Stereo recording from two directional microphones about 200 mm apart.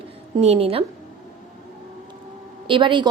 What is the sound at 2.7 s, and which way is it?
Speech, 25° right (ahead or behind).